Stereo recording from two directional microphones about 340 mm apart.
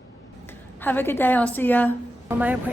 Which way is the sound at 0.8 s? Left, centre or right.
Centre.